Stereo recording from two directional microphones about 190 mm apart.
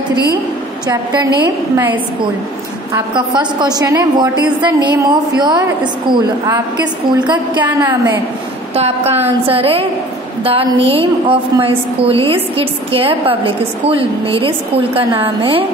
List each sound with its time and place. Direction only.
0.8 s a woman's voice: 20° right (ahead or behind)
3.2 s a woman's voice: 25° right (ahead or behind)
8.7 s a woman's voice: 35° right (ahead or behind)